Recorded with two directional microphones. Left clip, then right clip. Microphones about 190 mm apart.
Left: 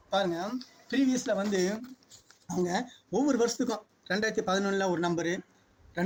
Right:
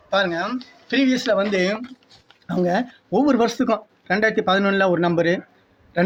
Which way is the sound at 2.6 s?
55° right (ahead or behind).